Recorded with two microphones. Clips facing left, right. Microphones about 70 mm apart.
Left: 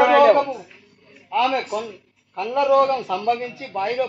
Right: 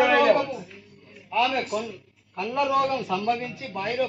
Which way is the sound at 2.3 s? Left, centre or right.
Left.